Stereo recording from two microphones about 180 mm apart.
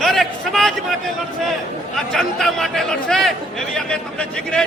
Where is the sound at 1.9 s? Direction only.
Centre (ahead or behind).